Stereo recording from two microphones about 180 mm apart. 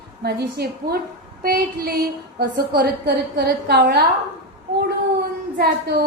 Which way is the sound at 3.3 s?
60° right (ahead or behind).